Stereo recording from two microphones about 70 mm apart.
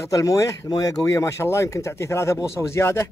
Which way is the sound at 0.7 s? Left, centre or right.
Left.